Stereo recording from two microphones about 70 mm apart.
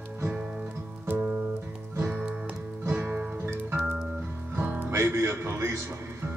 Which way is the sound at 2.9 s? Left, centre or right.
Centre.